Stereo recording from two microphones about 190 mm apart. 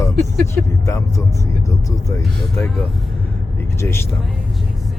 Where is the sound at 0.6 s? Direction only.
15° left (ahead or behind).